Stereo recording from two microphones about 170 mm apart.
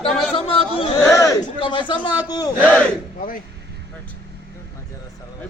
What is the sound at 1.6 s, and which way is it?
Speech, 30° left (ahead or behind).